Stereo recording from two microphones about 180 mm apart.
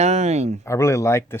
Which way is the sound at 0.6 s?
15° left (ahead or behind).